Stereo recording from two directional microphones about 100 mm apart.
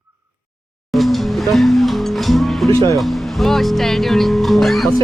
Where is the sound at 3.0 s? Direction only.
Centre (ahead or behind).